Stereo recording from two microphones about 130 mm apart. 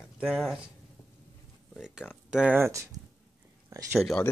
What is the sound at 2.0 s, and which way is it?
Speech, 20° left (ahead or behind).